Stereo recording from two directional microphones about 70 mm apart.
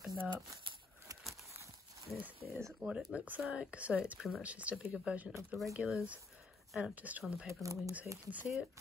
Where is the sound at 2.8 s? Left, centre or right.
Centre.